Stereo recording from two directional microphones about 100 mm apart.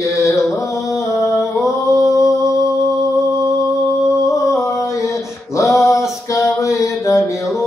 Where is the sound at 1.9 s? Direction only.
5° right (ahead or behind).